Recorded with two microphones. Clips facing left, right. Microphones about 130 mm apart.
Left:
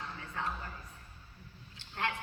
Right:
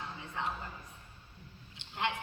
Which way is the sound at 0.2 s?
20° right (ahead or behind).